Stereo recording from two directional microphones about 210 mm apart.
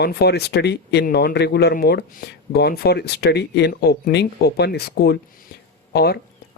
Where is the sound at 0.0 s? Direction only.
50° left (ahead or behind).